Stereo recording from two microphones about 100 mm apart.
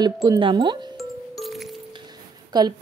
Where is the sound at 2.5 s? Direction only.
45° right (ahead or behind).